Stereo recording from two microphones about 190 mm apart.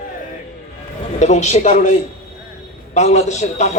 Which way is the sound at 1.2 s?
35° left (ahead or behind).